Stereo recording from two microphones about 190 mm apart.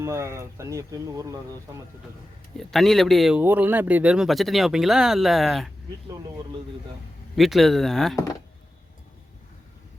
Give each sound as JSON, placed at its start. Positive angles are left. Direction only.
{"t": 0.0, "sound": "speech", "side_deg": -15}
{"t": 2.6, "sound": "speech", "side_deg": 0}
{"t": 7.3, "sound": "speech", "side_deg": 0}